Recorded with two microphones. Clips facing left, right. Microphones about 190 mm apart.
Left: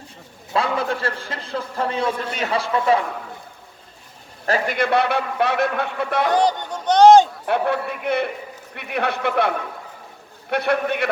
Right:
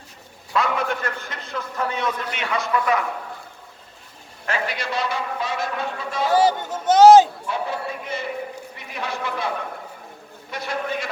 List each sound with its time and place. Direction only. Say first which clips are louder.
0.5 s a man's voice: left 1 dB; 30° left (ahead or behind)
4.4 s a man's voice: left 6 dB; 45° left (ahead or behind); by 6.3 s 60° left (ahead or behind)
6.3 s speech: right 1 dB; 5° right (ahead or behind)
7.4 s a man's voice: left 6 dB; 65° left (ahead or behind)
10.5 s a man's voice: left 7 dB; 60° left (ahead or behind)